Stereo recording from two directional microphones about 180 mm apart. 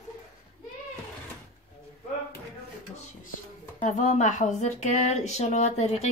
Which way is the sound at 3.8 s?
40° left (ahead or behind).